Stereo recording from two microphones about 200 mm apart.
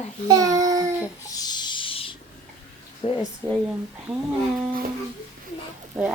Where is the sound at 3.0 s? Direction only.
30° left (ahead or behind).